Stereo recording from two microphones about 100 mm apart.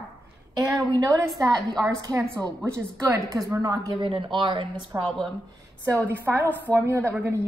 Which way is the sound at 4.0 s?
60° right (ahead or behind).